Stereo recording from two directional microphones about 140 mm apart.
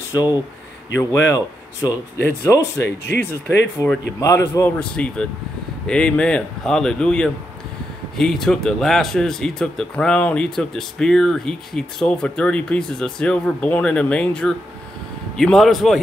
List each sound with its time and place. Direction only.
0.1 s speech: 30° left (ahead or behind)
0.9 s speech: 20° left (ahead or behind); by 16.0 s centre (ahead or behind)